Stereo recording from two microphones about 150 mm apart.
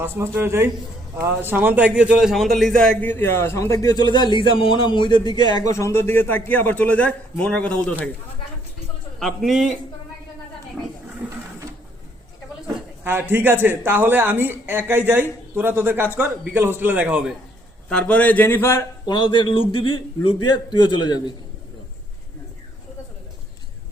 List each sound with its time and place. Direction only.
0.0 s a man's voice: 15° right (ahead or behind); by 8.1 s 5° left (ahead or behind)
9.1 s speech: centre (ahead or behind)
12.6 s speech: 15° right (ahead or behind)
17.8 s a man's voice: 10° left (ahead or behind); by 21.2 s 30° left (ahead or behind)